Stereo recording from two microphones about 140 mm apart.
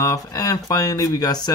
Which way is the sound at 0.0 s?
25° left (ahead or behind).